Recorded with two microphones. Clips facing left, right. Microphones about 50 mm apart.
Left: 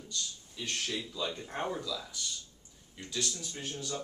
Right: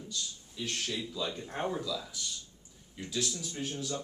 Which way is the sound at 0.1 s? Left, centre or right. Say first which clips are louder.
Left 3 dB; centre.